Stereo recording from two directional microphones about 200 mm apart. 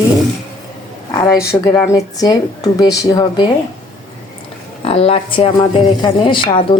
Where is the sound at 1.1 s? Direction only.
15° left (ahead or behind).